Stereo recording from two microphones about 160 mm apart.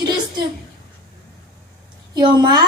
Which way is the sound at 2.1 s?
25° right (ahead or behind).